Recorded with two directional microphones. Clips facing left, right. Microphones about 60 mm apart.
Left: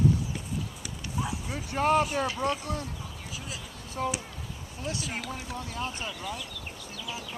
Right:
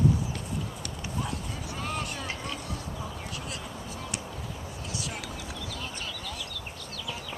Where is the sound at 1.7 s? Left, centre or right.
Left.